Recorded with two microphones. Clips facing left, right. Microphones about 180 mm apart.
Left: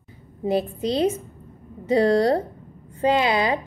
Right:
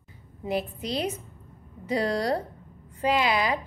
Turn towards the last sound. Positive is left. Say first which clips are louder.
# left 4 dB
turn(degrees=25)  # may be behind; listen again after turning